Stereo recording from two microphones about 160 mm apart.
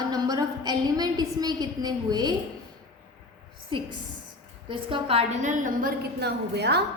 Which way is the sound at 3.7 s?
30° right (ahead or behind).